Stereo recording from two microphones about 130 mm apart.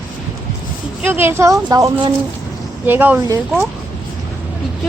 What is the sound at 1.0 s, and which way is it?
Speech, 15° right (ahead or behind).